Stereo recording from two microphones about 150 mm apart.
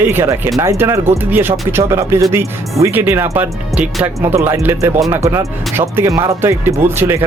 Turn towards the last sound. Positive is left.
turn(degrees=-15)  # may be behind; listen again after turning